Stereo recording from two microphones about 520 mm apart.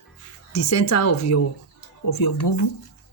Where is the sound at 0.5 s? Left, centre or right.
Left.